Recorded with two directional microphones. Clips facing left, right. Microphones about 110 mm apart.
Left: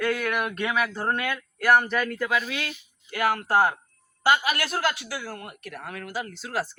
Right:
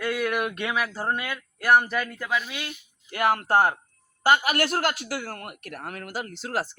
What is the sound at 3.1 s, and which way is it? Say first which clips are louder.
A man's voice: right 1 dB; 30° right (ahead or behind).